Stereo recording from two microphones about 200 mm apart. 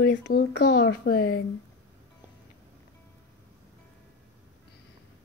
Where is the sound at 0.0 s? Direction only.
60° left (ahead or behind).